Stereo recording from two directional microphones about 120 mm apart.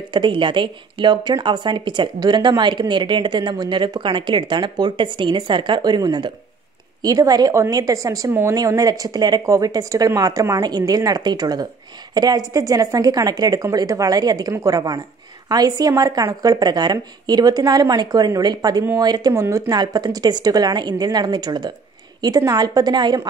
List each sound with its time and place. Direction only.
0.1 s speech: 40° right (ahead or behind)